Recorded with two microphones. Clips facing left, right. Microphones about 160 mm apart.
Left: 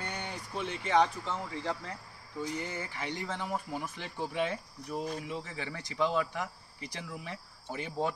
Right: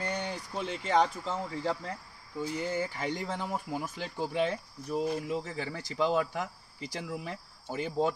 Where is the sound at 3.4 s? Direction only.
5° right (ahead or behind).